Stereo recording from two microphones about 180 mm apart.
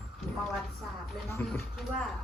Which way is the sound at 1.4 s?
10° left (ahead or behind).